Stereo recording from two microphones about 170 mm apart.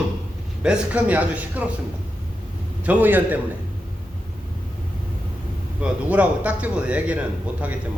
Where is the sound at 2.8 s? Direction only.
10° right (ahead or behind).